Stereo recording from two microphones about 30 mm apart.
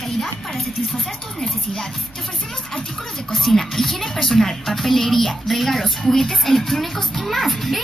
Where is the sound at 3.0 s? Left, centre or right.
Centre.